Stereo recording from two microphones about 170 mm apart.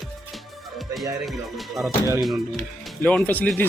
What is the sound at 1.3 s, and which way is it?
Speech, centre (ahead or behind).